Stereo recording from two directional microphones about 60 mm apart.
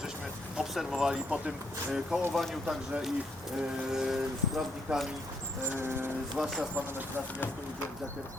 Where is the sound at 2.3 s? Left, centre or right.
Centre.